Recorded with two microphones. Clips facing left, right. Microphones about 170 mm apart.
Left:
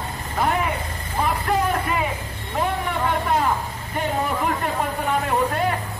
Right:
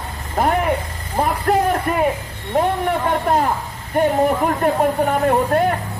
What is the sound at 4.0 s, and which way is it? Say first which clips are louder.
A man's voice: right 8 dB; 50° right (ahead or behind).